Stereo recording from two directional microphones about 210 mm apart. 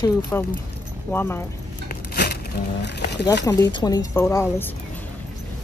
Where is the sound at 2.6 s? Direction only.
50° left (ahead or behind).